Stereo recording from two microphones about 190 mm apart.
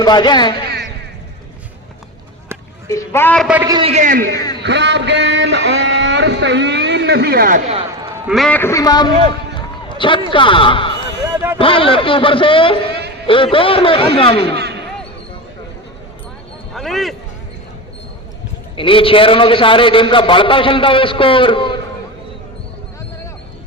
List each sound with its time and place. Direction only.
0.0 s a man's voice: 20° left (ahead or behind)
2.9 s a woman's voice: 15° left (ahead or behind)
3.4 s a man's voice: 5° right (ahead or behind)
3.7 s a man's voice: 25° right (ahead or behind)
3.9 s a man's voice: 45° right (ahead or behind)
4.6 s speech: 65° right (ahead or behind); by 7.6 s 50° right (ahead or behind)
7.7 s a sound: 30° right (ahead or behind)
8.3 s a man's voice: 5° left (ahead or behind); by 9.1 s 20° left (ahead or behind)
9.6 s a sound: 25° left (ahead or behind)
11.5 s a man's voice: 30° left (ahead or behind)
14.5 s basketball bounce: 60° right (ahead or behind)
16.7 s a sound: centre (ahead or behind)
18.8 s a man's voice: 25° left (ahead or behind)